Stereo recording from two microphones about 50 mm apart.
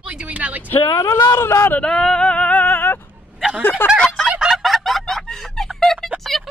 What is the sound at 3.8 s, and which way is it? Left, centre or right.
Fowl, left.